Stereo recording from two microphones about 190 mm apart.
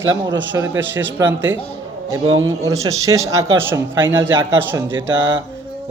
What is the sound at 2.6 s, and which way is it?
A man's voice, 15° right (ahead or behind).